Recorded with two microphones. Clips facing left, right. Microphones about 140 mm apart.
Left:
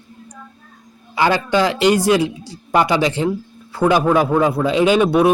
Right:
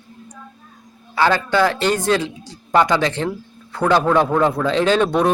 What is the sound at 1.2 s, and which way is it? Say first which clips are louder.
A man's voice: even; 15° left (ahead or behind).